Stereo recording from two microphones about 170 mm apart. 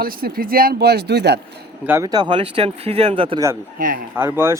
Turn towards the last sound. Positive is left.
turn(degrees=-15)  # may be behind; listen again after turning